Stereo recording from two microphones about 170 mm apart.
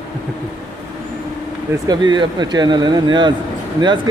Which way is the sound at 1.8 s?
25° right (ahead or behind).